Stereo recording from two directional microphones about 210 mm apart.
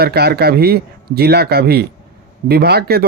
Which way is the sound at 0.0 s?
50° right (ahead or behind).